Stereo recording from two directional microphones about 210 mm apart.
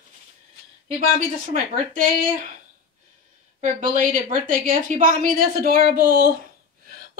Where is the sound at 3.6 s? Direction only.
40° right (ahead or behind).